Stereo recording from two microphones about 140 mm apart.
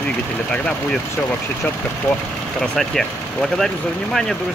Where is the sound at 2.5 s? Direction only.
5° left (ahead or behind).